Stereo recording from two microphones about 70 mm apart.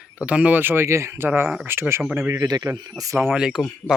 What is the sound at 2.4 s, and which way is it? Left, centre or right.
Speech, right.